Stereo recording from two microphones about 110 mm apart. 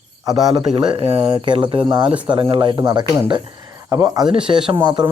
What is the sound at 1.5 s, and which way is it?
A man's voice, 50° right (ahead or behind).